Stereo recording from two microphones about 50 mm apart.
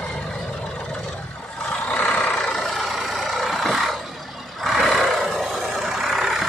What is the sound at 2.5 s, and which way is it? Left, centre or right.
Vehicle, centre.